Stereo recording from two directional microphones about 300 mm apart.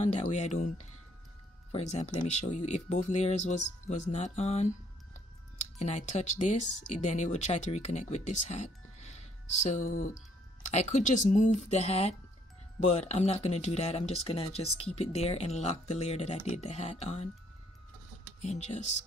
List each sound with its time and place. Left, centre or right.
0.1 s speech: left
1.7 s speech: left
5.8 s speech: left
18.4 s speech: left